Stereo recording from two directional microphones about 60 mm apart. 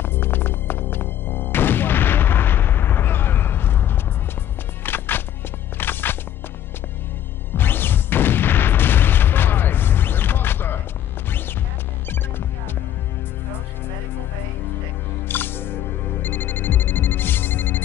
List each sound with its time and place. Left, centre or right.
0.0 s music: left
7.5 s boom: left
11.2 s music: left
15.2 s music: left